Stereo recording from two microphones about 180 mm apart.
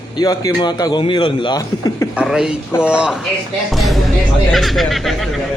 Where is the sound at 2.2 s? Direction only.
5° right (ahead or behind).